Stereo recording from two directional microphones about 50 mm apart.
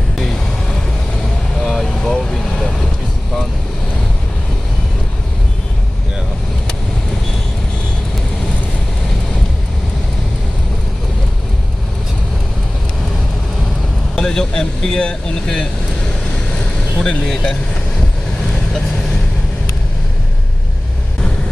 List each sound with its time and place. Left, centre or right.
1.7 s vehicle: centre
14.1 s speech: centre
17.0 s speech: centre